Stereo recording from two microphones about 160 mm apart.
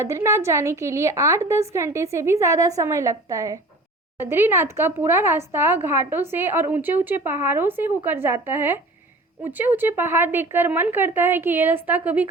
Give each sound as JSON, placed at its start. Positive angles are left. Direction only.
{"t": 0.0, "sound": "speech", "side_deg": -15}